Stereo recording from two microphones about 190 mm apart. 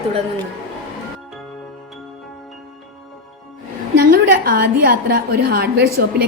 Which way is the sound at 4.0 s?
50° right (ahead or behind).